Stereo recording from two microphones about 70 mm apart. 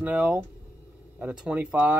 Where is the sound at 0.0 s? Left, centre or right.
Centre.